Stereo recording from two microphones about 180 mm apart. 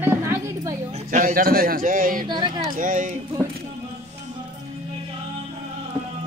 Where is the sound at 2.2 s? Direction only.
25° right (ahead or behind).